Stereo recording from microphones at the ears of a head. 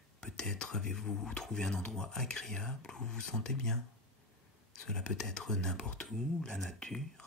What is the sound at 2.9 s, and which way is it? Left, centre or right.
Speech, left.